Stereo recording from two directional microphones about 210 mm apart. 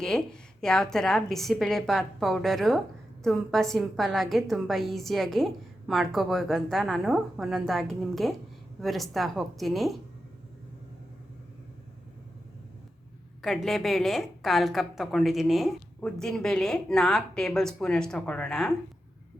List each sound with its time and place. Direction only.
0.0 s a woman's voice: 5° left (ahead or behind)
13.4 s a woman's voice: centre (ahead or behind)